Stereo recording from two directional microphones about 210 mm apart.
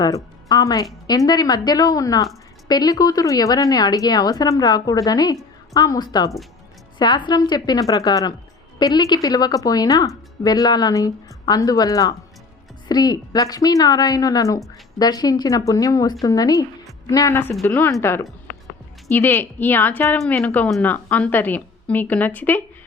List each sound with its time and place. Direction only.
0.4 s a woman's voice: 15° left (ahead or behind)